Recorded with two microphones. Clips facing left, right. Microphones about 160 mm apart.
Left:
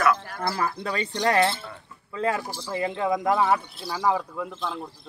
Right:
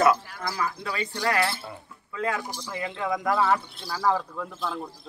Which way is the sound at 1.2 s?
20° left (ahead or behind).